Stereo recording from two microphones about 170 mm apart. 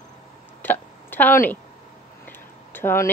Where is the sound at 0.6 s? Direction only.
10° left (ahead or behind).